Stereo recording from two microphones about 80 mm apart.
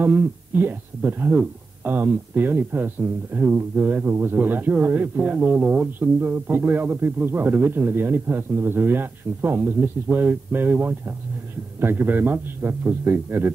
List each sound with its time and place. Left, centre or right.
0.0 s speech: right